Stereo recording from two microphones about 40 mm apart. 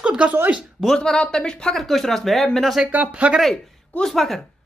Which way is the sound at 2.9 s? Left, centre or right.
Right.